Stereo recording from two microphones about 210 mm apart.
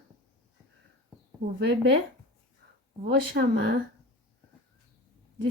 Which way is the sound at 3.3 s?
50° right (ahead or behind).